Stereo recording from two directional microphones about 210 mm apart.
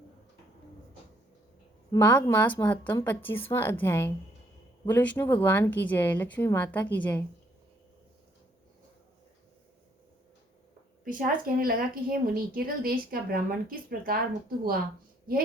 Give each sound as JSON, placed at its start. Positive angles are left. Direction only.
{"t": 1.9, "sound": "speech", "side_deg": 15}
{"t": 11.0, "sound": "a woman's voice", "side_deg": -40}